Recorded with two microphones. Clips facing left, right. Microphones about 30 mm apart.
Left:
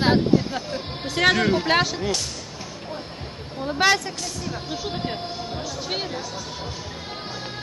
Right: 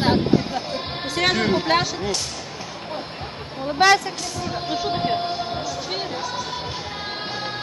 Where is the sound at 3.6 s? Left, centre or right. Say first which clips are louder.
Right 4 dB; centre.